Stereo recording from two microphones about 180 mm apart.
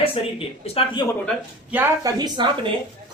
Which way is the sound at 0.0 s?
30° left (ahead or behind).